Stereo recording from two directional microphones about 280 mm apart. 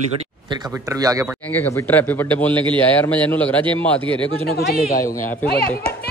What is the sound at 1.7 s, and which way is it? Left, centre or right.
A man's voice, centre.